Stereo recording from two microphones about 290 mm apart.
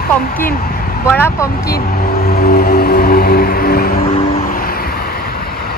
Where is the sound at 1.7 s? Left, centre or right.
Left.